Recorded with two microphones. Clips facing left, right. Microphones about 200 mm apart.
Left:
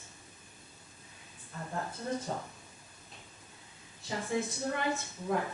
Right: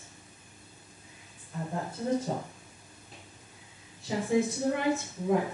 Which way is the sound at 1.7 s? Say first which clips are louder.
Right 6 dB; 15° right (ahead or behind).